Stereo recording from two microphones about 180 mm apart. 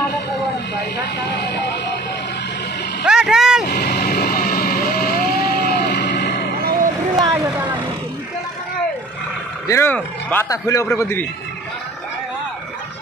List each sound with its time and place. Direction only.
3.1 s vehicle: 5° right (ahead or behind)
3.7 s music: 50° left (ahead or behind); by 6.5 s 65° left (ahead or behind)
7.2 s vehicle: 20° right (ahead or behind)
9.7 s speech: 10° left (ahead or behind)